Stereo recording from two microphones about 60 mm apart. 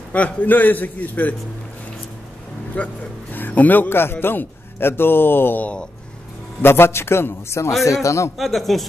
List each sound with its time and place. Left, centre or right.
0.1 s a man's voice: left
2.7 s a man's voice: left
7.8 s a man's voice: left
8.4 s speech: centre